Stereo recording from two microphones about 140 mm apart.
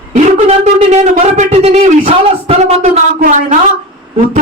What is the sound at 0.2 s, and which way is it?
Speech, 55° right (ahead or behind).